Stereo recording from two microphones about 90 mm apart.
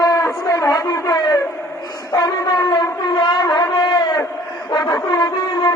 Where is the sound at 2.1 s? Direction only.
50° left (ahead or behind).